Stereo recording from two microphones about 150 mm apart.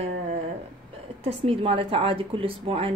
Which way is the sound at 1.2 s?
40° right (ahead or behind).